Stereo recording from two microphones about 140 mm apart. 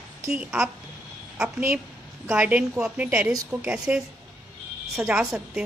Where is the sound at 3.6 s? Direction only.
10° right (ahead or behind).